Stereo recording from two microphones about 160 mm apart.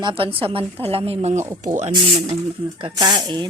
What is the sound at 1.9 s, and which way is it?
Speech, 35° right (ahead or behind).